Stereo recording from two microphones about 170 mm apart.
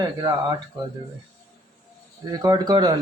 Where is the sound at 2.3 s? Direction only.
20° right (ahead or behind).